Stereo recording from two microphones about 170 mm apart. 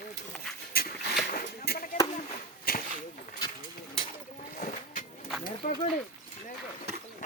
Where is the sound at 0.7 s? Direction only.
60° left (ahead or behind).